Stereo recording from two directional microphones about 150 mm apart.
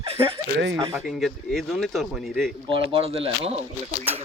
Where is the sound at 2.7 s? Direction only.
35° right (ahead or behind).